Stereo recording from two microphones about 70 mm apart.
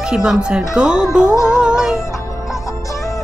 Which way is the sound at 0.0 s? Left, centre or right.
Centre.